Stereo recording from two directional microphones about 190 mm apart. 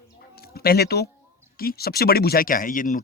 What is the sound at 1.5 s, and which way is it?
Speech, 55° left (ahead or behind).